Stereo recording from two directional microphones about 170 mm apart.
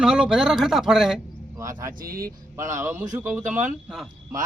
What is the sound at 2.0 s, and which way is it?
Speech, 60° right (ahead or behind).